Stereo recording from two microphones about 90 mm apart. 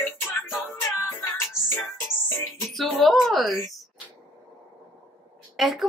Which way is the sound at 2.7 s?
Centre (ahead or behind).